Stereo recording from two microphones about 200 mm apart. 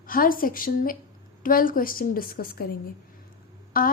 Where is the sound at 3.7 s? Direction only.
45° left (ahead or behind).